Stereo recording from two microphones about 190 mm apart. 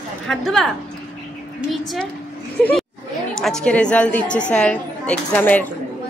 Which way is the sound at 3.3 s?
5° left (ahead or behind).